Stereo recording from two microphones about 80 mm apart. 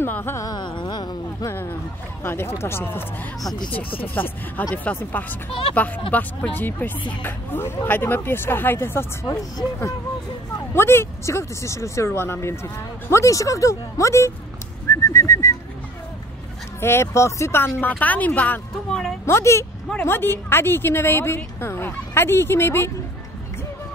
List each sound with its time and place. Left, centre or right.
0.0 s speech: left
0.6 s music: left
1.4 s a sound: left
2.2 s speech: left
4.1 s speech: left
6.1 s speech: left
10.7 s speech: left
14.9 s bird: left
16.8 s speech: left
18.9 s speech: centre
19.2 s speech: left